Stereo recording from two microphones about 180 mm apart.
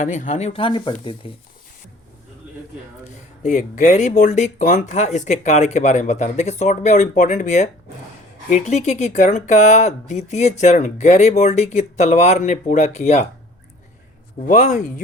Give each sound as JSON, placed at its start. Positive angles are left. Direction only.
{"t": 0.0, "sound": "speech", "side_deg": 45}
{"t": 3.1, "sound": "speech", "side_deg": 45}
{"t": 14.3, "sound": "speech", "side_deg": 45}